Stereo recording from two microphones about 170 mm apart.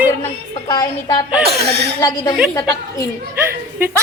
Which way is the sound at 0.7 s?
25° left (ahead or behind).